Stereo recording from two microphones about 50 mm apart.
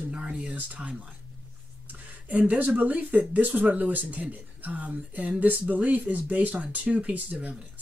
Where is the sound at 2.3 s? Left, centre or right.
Right.